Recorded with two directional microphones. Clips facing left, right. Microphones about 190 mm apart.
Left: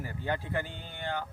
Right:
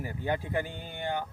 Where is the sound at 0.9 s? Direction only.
15° right (ahead or behind).